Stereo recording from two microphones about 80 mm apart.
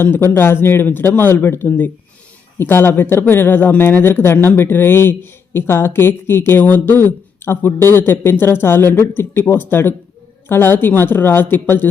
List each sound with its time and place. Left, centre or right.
0.3 s speech: left